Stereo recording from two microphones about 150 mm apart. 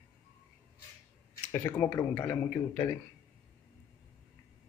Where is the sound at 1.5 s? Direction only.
15° left (ahead or behind).